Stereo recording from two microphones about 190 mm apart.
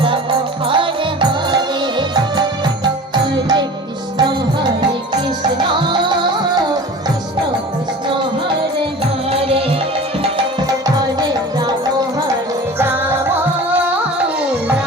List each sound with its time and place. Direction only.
0.0 s music: 25° right (ahead or behind)
9.3 s music: 30° right (ahead or behind)
10.3 s music: 20° right (ahead or behind)